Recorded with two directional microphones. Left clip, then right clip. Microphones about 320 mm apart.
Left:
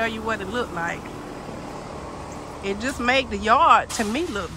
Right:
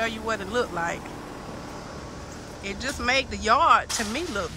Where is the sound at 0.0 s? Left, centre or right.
Centre.